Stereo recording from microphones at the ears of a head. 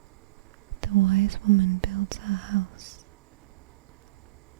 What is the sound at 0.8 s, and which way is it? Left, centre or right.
Speech, right.